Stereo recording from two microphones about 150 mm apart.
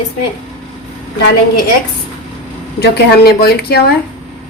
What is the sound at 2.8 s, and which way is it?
Speech, 90° left.